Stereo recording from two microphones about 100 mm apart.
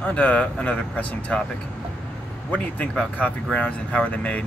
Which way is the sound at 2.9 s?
10° left (ahead or behind).